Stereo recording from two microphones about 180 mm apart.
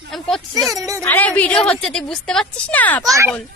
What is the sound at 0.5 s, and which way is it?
Speech, 20° right (ahead or behind).